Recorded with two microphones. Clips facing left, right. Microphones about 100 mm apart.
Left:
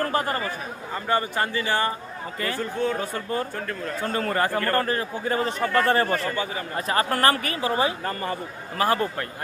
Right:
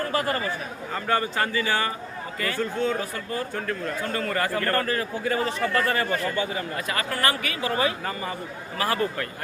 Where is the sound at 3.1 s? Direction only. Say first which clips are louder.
Left 2 dB; 35° left (ahead or behind).